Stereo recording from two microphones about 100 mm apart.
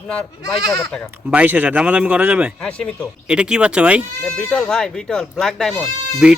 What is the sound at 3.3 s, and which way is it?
Speech, 10° right (ahead or behind).